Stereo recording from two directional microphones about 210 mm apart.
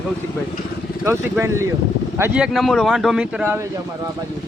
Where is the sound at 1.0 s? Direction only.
15° right (ahead or behind).